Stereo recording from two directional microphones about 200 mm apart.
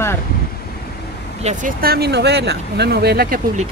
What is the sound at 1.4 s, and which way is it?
Speech, 40° right (ahead or behind).